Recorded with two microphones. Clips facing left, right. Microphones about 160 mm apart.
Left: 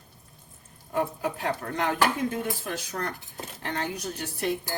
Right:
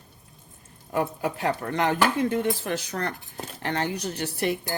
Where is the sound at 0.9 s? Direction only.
75° right (ahead or behind).